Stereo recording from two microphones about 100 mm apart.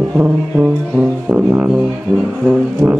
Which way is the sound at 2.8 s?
25° right (ahead or behind).